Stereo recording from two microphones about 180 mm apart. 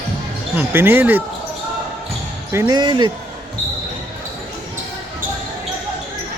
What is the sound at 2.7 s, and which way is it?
Speech, 25° right (ahead or behind).